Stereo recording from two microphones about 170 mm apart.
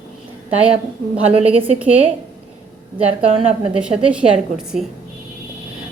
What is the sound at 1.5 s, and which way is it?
Speech, 35° right (ahead or behind).